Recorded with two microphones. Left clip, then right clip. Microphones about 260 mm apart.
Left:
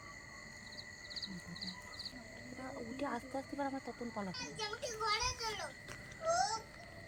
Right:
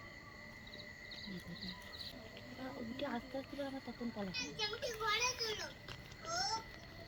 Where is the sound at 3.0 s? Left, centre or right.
Centre.